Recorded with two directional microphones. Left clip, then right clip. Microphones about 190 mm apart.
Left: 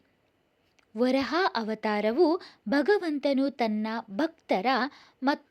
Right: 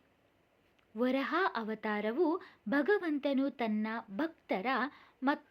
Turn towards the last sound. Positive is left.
turn(degrees=35)  # may be behind; listen again after turning